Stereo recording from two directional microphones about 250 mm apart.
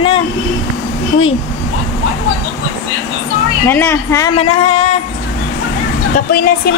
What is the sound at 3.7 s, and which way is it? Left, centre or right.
Speech, centre.